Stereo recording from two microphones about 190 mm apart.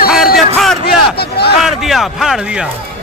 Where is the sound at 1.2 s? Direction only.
55° left (ahead or behind).